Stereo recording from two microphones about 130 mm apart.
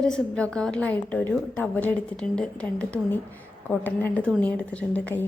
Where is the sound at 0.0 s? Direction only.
5° left (ahead or behind).